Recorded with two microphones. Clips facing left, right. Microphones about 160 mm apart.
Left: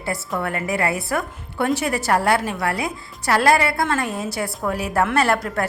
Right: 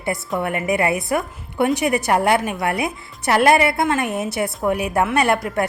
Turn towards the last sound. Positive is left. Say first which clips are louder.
# right 1 dB
turn(degrees=-15)  # may be behind; listen again after turning